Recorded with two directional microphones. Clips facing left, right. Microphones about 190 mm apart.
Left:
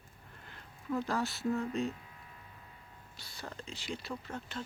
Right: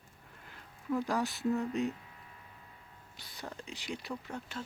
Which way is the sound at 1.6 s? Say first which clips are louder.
Right 1 dB; 20° right (ahead or behind).